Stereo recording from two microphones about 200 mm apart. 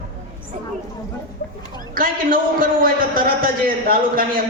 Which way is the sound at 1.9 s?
45° right (ahead or behind).